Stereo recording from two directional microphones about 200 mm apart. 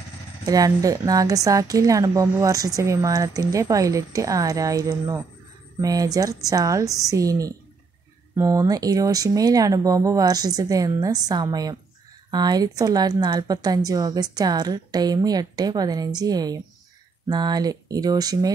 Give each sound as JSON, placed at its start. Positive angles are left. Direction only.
{"t": 0.5, "sound": "a woman's voice", "side_deg": -15}